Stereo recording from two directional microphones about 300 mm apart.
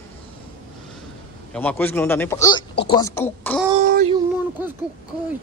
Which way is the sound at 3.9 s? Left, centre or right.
Centre.